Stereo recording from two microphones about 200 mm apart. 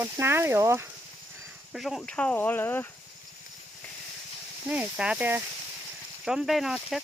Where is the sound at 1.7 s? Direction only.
Centre (ahead or behind).